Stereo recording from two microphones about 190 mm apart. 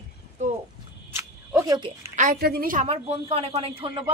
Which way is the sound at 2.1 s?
50° right (ahead or behind).